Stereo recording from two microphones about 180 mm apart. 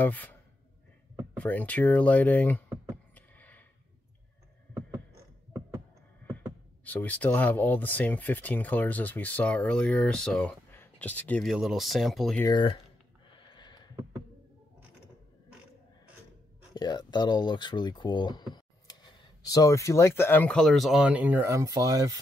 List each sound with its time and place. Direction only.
0.0 s speech: 10° left (ahead or behind)
3.2 s a sound: 10° left (ahead or behind)
6.8 s speech: 10° left (ahead or behind)
12.4 s speech: 25° left (ahead or behind)
13.3 s a sound: 25° left (ahead or behind)
16.7 s speech: 25° left (ahead or behind); by 22.2 s 20° right (ahead or behind)